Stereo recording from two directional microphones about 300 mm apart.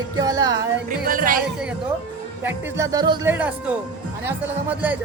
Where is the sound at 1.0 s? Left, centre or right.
Right.